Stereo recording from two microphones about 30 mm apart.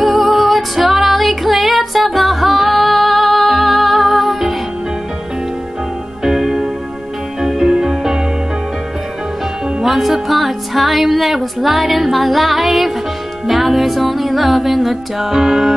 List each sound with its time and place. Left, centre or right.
0.0 s music: centre
6.2 s music: centre
9.8 s speech: centre
13.5 s music: centre